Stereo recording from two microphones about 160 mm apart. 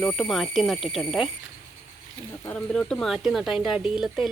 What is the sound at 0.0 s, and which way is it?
Speech, centre (ahead or behind).